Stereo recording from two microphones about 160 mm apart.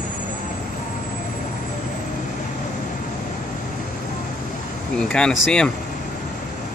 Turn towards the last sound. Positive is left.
turn(degrees=5)  # may be behind; listen again after turning